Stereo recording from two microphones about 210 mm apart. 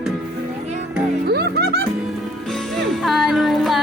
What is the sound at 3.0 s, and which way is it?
Music, centre (ahead or behind).